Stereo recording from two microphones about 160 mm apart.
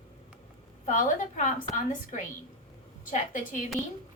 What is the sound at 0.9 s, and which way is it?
A woman's voice, 55° left (ahead or behind).